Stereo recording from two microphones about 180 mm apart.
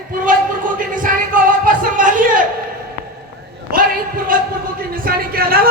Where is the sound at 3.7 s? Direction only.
50° right (ahead or behind).